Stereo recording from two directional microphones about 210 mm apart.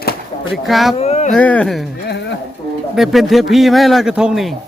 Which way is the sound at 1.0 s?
30° left (ahead or behind).